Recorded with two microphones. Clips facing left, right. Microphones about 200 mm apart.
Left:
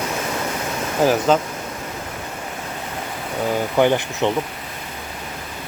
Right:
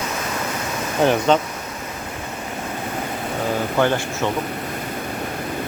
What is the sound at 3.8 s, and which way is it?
Speech, 15° left (ahead or behind).